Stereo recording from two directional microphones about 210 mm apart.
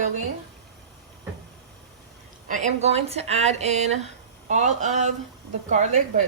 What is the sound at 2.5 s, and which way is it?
Speech, 35° right (ahead or behind).